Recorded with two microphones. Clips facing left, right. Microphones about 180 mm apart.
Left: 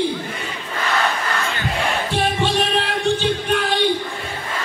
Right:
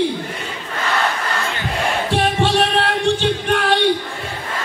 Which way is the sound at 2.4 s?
75° right (ahead or behind).